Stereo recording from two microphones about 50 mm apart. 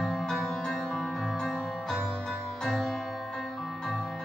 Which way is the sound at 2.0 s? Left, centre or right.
Centre.